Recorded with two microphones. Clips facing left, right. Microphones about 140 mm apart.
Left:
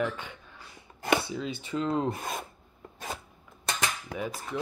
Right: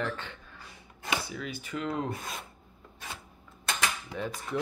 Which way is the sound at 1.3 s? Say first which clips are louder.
Left 4 dB; 25° left (ahead or behind).